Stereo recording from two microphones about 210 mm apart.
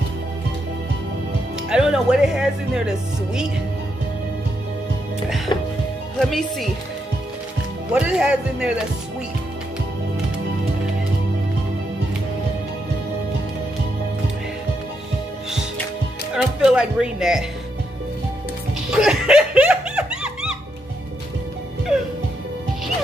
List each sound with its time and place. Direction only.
1.7 s speech: 5° right (ahead or behind)
5.5 s music: 20° left (ahead or behind)
6.1 s speech: centre (ahead or behind)
7.9 s speech: 5° right (ahead or behind)
16.3 s speech: 5° right (ahead or behind)
18.9 s music: 5° right (ahead or behind)